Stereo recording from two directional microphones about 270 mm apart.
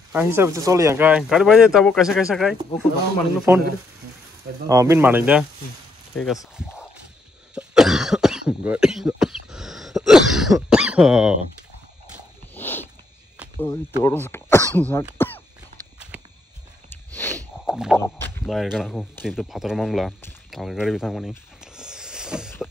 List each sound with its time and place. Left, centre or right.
0.1 s speech: centre
4.6 s speech: centre
7.5 s cough: centre
12.5 s a sound: centre
14.0 s speech: centre
16.9 s sniff: centre
17.3 s snort: centre
17.9 s speech: centre